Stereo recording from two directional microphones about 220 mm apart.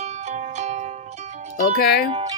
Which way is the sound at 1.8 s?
45° left (ahead or behind).